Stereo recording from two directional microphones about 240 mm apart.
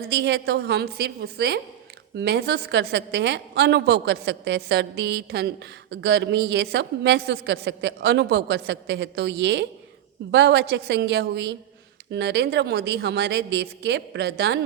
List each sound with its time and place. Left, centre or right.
0.1 s a woman's voice: right